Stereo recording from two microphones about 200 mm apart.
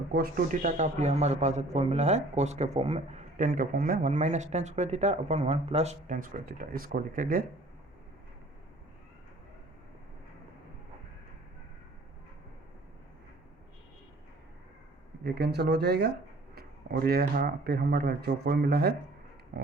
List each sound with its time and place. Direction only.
0.1 s a man's voice: 45° right (ahead or behind)
15.2 s speech: 55° right (ahead or behind)
19.5 s pig: 45° right (ahead or behind)